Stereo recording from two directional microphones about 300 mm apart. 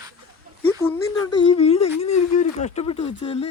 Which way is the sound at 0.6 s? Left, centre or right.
Centre.